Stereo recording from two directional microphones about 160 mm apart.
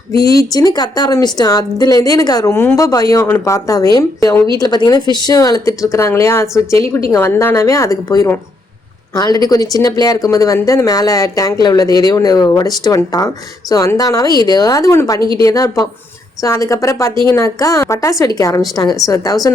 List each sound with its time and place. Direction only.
0.5 s speech: 25° left (ahead or behind)
15.2 s a woman's voice: 30° right (ahead or behind)
15.4 s speech: 20° left (ahead or behind)